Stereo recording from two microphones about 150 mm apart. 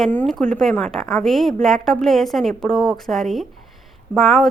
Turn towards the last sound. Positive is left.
turn(degrees=0)  # may be behind; listen again after turning